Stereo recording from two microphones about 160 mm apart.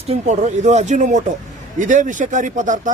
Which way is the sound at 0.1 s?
45° right (ahead or behind).